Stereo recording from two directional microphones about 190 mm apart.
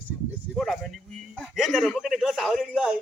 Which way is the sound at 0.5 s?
Centre (ahead or behind).